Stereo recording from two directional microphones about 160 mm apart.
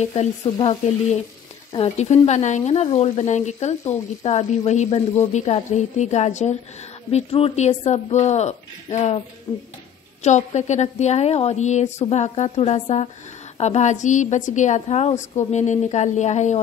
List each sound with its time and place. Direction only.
0.0 s speech: 45° left (ahead or behind)
1.7 s speech: 40° left (ahead or behind)
9.5 s speech: 25° left (ahead or behind)
10.2 s speech: 45° left (ahead or behind)